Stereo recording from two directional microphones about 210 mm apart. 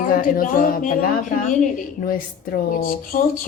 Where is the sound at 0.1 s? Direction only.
40° left (ahead or behind).